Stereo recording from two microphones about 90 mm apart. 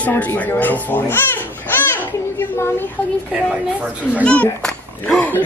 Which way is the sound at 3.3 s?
15° right (ahead or behind).